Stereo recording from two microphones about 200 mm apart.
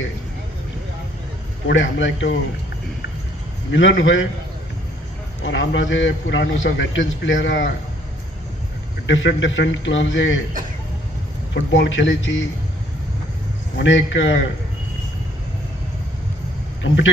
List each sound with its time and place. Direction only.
1.7 s a man's voice: 70° left (ahead or behind)
3.7 s a man's voice: 70° left (ahead or behind)
5.4 s a man's voice: 70° left (ahead or behind)
9.0 s a man's voice: 70° left (ahead or behind)
11.5 s a man's voice: 65° left (ahead or behind)
13.7 s a man's voice: 70° left (ahead or behind)
16.8 s a man's voice: 70° left (ahead or behind)